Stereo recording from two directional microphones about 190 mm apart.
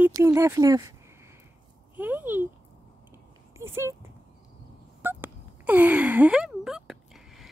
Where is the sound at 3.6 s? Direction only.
15° right (ahead or behind).